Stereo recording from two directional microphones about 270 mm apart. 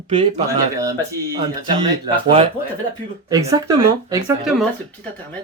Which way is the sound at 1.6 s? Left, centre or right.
Centre.